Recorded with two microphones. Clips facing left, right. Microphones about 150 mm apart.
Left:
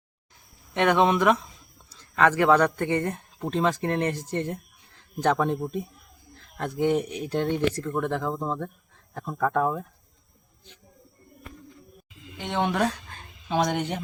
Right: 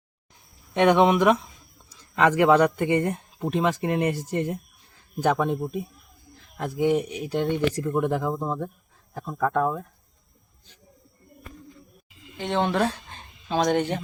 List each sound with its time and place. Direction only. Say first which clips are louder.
0.7 s speech: right 3 dB; 15° right (ahead or behind); by 7.4 s centre (ahead or behind)
7.7 s speech: right 3 dB; 15° right (ahead or behind)
12.4 s speech: right 2 dB; 15° left (ahead or behind)
12.8 s a sound: right 1 dB; 25° right (ahead or behind)
13.7 s speech: right 5 dB; 15° left (ahead or behind)